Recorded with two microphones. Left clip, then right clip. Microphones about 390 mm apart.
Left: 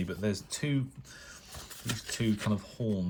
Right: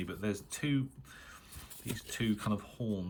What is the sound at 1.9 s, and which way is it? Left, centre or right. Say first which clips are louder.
Speech: left 3 dB; centre.